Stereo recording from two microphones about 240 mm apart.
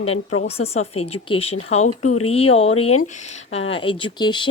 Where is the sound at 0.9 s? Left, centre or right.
Left.